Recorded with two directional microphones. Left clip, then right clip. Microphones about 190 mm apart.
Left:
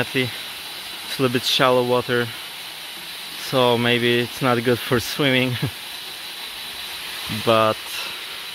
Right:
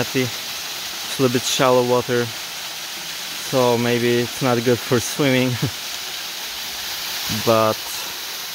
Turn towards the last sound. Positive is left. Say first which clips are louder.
# even
turn(degrees=0)  # may be behind; listen again after turning